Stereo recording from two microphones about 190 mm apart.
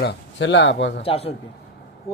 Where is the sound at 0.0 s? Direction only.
65° left (ahead or behind).